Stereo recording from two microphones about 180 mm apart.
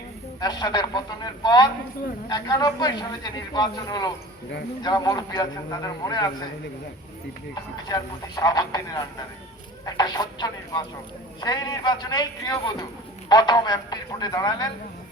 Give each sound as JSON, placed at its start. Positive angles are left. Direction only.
{"t": 0.3, "sound": "a man's voice", "side_deg": 25}
{"t": 7.5, "sound": "a man's voice", "side_deg": 20}